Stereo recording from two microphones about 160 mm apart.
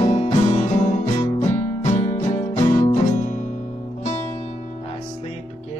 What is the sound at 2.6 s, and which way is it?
Music, 30° left (ahead or behind).